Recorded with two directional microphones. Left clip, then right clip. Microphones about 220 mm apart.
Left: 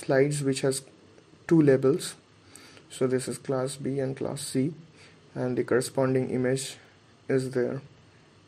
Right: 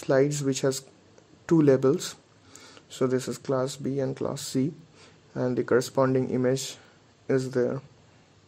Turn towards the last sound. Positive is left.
turn(degrees=-25)  # may be behind; listen again after turning